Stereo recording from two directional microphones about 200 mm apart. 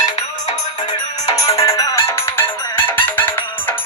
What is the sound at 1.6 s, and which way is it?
Music, 15° left (ahead or behind).